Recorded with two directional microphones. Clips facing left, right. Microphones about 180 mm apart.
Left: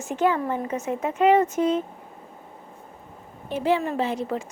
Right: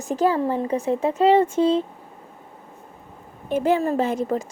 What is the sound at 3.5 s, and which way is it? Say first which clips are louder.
Speech: right 3 dB; 45° right (ahead or behind).